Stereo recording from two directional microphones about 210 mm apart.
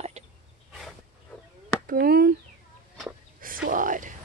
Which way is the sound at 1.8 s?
45° right (ahead or behind).